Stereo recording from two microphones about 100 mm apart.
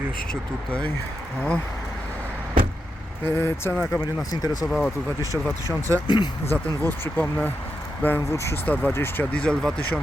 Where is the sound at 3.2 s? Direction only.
25° left (ahead or behind).